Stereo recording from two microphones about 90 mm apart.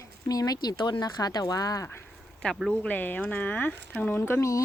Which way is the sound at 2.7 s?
20° left (ahead or behind).